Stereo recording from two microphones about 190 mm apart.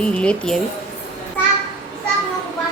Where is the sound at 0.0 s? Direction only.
5° left (ahead or behind).